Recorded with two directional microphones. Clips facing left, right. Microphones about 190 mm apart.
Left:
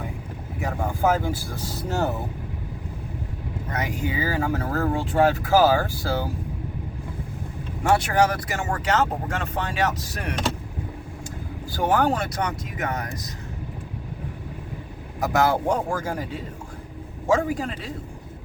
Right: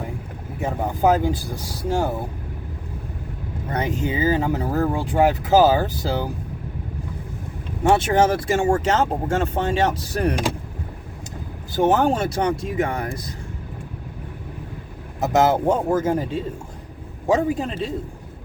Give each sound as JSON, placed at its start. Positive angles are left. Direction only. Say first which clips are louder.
{"t": 0.6, "sound": "speech", "louder": "right 3 dB", "side_deg": -20}
{"t": 3.8, "sound": "speech", "louder": "right 4 dB", "side_deg": -25}
{"t": 7.9, "sound": "speech", "louder": "right 2 dB", "side_deg": -25}
{"t": 11.7, "sound": "speech", "louder": "right 4 dB", "side_deg": -20}
{"t": 15.2, "sound": "speech", "louder": "right 4 dB", "side_deg": -20}
{"t": 17.2, "sound": "speech", "louder": "right 2 dB", "side_deg": -20}